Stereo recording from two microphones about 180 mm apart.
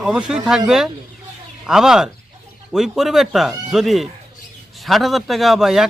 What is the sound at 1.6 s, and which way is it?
Speech, 5° right (ahead or behind).